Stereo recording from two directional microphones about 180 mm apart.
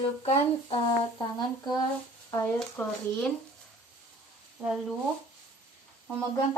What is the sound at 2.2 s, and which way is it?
Speech, 15° left (ahead or behind).